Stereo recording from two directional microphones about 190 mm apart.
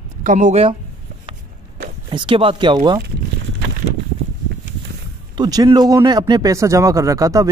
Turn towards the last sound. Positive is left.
turn(degrees=-15)  # may be behind; listen again after turning